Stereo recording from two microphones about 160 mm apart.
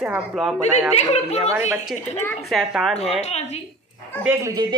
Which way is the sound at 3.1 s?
45° left (ahead or behind).